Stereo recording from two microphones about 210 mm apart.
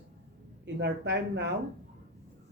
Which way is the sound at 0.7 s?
55° right (ahead or behind).